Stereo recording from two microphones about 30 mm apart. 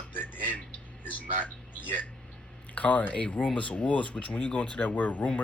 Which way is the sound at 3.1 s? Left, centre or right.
Left.